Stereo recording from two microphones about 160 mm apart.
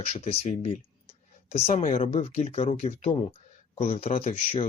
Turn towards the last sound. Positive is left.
turn(degrees=40)  # may be behind; listen again after turning